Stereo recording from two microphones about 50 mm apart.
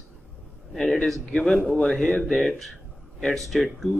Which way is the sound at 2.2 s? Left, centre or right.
Centre.